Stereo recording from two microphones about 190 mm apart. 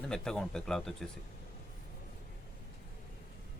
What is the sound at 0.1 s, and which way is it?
Speech, 5° left (ahead or behind).